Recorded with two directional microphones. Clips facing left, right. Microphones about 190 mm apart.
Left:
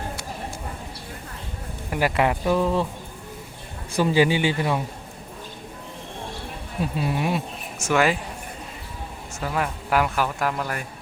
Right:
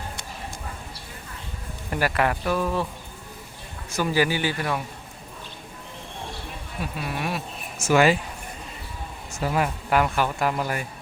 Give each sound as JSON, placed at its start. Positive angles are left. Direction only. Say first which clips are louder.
{"t": 1.9, "sound": "speech", "louder": "left 2 dB", "side_deg": 20}
{"t": 3.9, "sound": "speech", "louder": "left 4 dB", "side_deg": 25}
{"t": 6.9, "sound": "speech", "louder": "left 4 dB", "side_deg": 25}
{"t": 7.9, "sound": "speech", "louder": "right 2 dB", "side_deg": -5}
{"t": 9.4, "sound": "speech", "louder": "right 2 dB", "side_deg": -10}
{"t": 9.9, "sound": "speech", "louder": "even", "side_deg": 0}